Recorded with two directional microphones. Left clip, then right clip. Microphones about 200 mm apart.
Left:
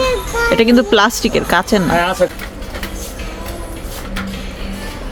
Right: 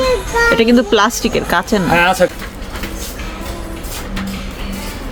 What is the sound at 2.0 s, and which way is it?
Speech, 40° right (ahead or behind).